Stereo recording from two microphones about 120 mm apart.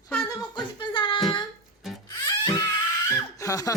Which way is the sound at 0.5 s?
45° left (ahead or behind).